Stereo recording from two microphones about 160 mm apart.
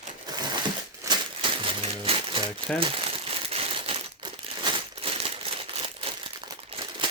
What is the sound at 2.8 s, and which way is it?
Crumpling, 35° right (ahead or behind).